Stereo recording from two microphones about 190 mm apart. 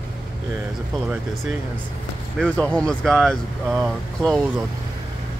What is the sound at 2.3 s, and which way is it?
Speech, 5° left (ahead or behind).